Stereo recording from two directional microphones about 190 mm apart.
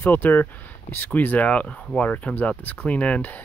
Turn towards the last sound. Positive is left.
turn(degrees=10)  # may be behind; listen again after turning